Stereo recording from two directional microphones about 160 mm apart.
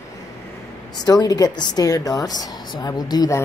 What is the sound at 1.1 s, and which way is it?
Speech, 25° left (ahead or behind).